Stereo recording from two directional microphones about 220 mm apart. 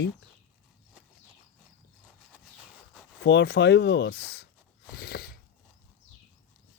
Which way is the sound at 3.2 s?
50° left (ahead or behind).